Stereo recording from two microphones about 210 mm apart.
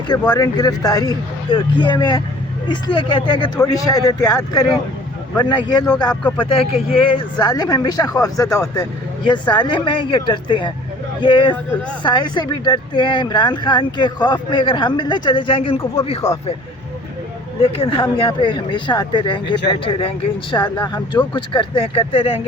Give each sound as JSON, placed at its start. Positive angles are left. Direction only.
{"t": 0.1, "sound": "speech", "side_deg": 20}
{"t": 17.6, "sound": "speech", "side_deg": 25}